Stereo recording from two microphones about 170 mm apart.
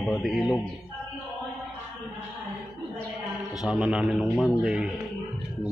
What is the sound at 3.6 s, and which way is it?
Music, 5° right (ahead or behind).